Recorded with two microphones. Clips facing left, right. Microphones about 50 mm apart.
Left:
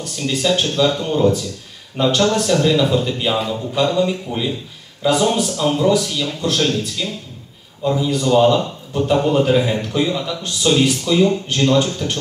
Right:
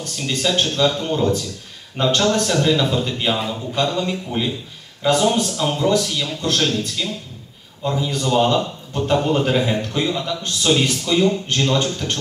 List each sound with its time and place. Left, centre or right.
0.4 s a man's voice: centre